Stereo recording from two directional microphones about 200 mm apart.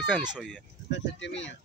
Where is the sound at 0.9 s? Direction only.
65° left (ahead or behind).